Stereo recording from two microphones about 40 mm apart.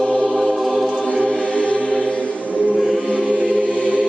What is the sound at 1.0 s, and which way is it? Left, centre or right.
Choir, left.